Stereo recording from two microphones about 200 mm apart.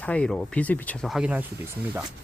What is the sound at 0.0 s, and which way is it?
Speech, 5° left (ahead or behind).